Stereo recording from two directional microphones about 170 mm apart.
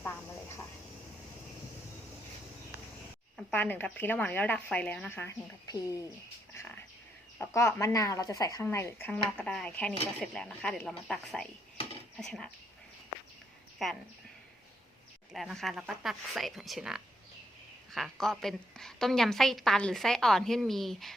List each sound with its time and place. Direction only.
0.0 s a sound: 15° left (ahead or behind)
3.5 s speech: 10° left (ahead or behind)
6.5 s a sound: 15° left (ahead or behind)
7.3 s a woman's voice: 15° left (ahead or behind)
13.8 s a woman's voice: centre (ahead or behind)
15.3 s a woman's voice: centre (ahead or behind)